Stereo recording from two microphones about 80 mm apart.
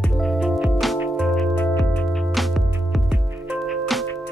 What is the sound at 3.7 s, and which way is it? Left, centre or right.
Music, centre.